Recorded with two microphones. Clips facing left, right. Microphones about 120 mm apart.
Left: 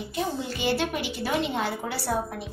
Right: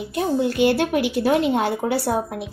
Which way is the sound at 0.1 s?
60° right (ahead or behind).